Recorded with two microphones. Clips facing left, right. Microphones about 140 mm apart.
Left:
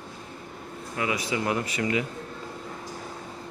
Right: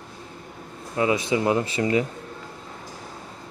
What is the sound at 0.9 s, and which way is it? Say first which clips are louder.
A man's voice: right 6 dB; 25° right (ahead or behind).